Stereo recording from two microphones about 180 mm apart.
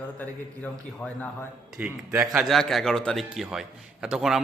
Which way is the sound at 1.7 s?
10° right (ahead or behind).